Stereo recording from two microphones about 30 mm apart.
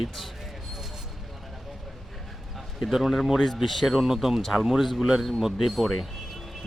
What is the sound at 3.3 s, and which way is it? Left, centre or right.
Speech, centre.